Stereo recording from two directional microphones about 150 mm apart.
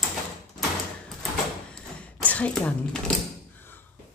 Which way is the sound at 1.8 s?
5° left (ahead or behind).